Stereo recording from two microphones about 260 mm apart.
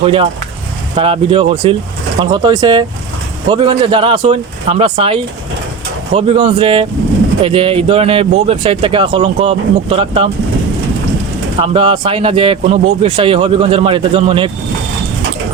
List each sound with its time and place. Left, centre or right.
0.0 s speech: right
11.6 s speech: centre